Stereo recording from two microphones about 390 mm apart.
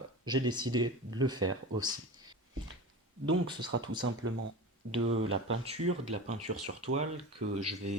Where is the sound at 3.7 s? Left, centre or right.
Right.